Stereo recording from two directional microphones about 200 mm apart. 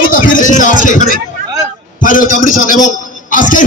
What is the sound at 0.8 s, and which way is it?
Speech, 40° left (ahead or behind).